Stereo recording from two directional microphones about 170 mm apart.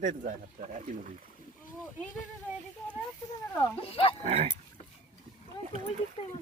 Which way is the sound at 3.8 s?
35° left (ahead or behind).